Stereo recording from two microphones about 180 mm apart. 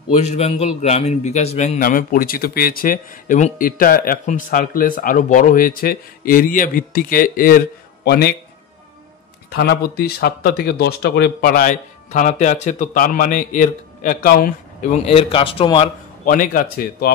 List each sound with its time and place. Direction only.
0.1 s a man's voice: 35° left (ahead or behind)
1.8 s speech: 50° left (ahead or behind)
9.5 s speech: 60° left (ahead or behind); by 15.9 s 30° left (ahead or behind)
16.3 s speech: 50° left (ahead or behind)